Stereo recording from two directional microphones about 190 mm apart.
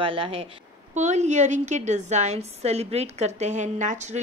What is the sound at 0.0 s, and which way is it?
A woman's voice, 30° right (ahead or behind).